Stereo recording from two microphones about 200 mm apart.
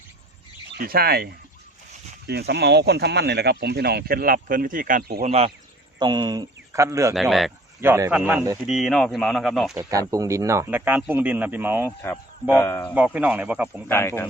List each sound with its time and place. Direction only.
0.7 s speech: 50° right (ahead or behind)
5.2 s speech: 30° right (ahead or behind)
6.0 s speech: 20° right (ahead or behind)
7.1 s speech: centre (ahead or behind)
7.8 s speech: 15° right (ahead or behind)
9.7 s speech: 15° right (ahead or behind)
11.9 s speech: 10° left (ahead or behind)
13.1 s speech: 5° right (ahead or behind)
13.8 s speech: 15° left (ahead or behind)